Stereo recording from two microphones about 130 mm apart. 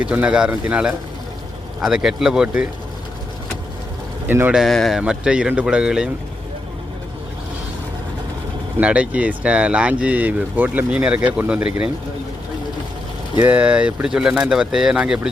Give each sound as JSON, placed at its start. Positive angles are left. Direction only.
{"t": 0.0, "sound": "speech", "side_deg": -10}
{"t": 4.3, "sound": "speech", "side_deg": -15}
{"t": 4.5, "sound": "speech", "side_deg": 0}
{"t": 8.8, "sound": "speech", "side_deg": -10}
{"t": 13.4, "sound": "speech", "side_deg": -10}